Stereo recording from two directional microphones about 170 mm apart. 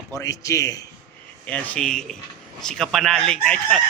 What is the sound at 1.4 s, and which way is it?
Speech, 5° left (ahead or behind).